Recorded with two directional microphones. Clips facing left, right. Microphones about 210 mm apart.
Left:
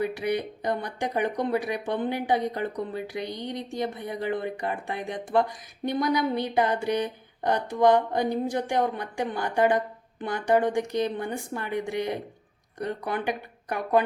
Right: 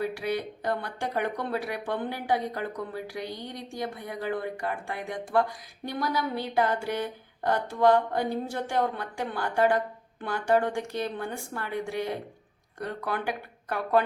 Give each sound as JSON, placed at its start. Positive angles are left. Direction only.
{"t": 0.0, "sound": "speech", "side_deg": 20}